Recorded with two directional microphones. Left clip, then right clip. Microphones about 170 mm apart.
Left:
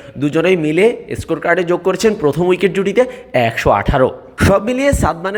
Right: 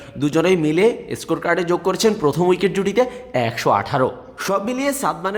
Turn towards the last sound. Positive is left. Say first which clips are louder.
# left 5 dB
turn(degrees=20)  # may be behind; listen again after turning